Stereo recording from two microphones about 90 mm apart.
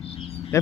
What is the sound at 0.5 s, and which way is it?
Speech, 30° left (ahead or behind).